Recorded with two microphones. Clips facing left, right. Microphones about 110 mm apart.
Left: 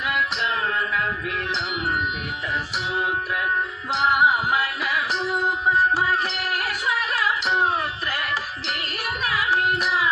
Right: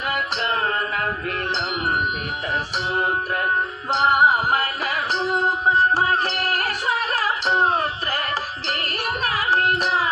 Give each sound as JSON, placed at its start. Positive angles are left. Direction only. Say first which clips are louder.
{"t": 3.9, "sound": "music", "louder": "right 2 dB", "side_deg": -40}